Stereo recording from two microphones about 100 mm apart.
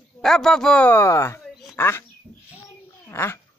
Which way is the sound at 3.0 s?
25° left (ahead or behind).